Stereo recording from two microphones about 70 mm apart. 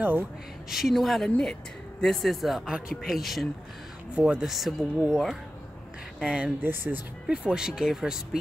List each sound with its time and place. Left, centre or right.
0.7 s speech: centre
4.1 s speech: centre
4.5 s speech: centre
6.6 s speech: right
7.2 s speech: centre